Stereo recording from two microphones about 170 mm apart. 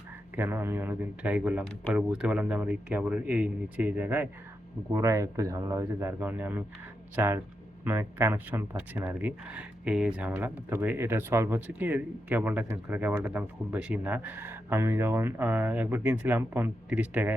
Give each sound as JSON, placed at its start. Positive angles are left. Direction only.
{"t": 0.3, "sound": "speech", "side_deg": -10}